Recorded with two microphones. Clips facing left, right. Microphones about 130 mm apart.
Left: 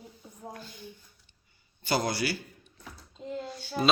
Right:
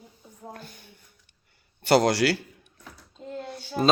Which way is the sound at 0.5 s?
55° right (ahead or behind).